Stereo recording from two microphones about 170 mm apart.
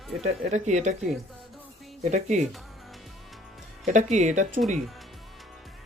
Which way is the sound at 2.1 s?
45° right (ahead or behind).